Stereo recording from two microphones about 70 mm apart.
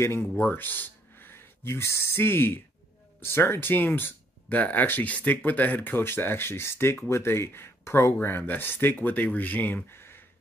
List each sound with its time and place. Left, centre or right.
0.0 s speech: left
0.4 s speech: left